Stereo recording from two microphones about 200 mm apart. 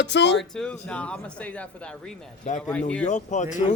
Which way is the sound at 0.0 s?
60° left (ahead or behind).